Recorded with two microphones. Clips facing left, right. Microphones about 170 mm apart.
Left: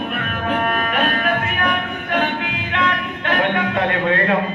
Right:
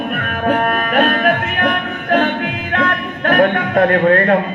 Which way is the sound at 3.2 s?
45° right (ahead or behind).